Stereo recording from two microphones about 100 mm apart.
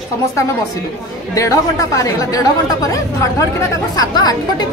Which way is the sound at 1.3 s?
35° left (ahead or behind).